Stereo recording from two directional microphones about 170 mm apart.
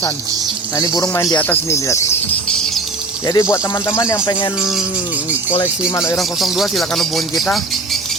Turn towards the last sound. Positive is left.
turn(degrees=0)  # may be behind; listen again after turning